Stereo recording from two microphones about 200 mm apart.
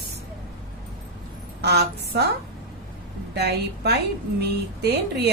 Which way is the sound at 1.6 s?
55° right (ahead or behind).